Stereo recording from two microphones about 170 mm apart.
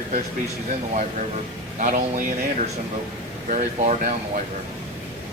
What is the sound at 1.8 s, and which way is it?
Speech, 50° right (ahead or behind).